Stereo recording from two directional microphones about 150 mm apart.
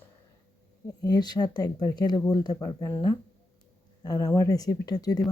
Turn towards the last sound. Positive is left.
turn(degrees=25)  # may be behind; listen again after turning